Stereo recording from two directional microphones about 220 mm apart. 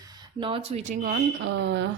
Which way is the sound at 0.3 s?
25° right (ahead or behind).